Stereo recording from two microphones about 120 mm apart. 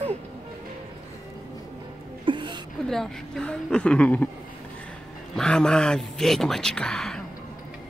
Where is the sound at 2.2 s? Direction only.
40° right (ahead or behind).